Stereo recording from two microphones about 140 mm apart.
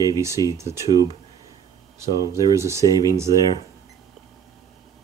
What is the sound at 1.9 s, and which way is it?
Speech, 20° right (ahead or behind).